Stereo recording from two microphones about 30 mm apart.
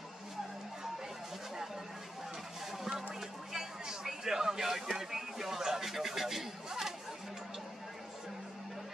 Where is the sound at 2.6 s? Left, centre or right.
Centre.